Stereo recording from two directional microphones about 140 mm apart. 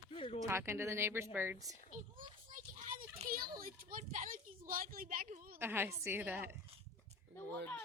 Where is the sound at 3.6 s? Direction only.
90° right.